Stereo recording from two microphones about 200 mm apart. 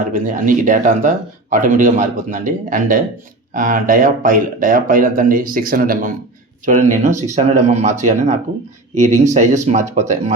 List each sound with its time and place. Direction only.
0.0 s speech: 40° right (ahead or behind)